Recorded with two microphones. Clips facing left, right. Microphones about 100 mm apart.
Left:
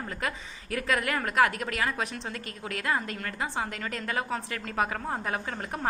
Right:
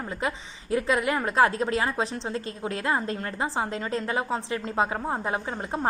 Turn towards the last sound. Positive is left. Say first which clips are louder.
# right 4 dB
turn(degrees=-25)  # may be behind; listen again after turning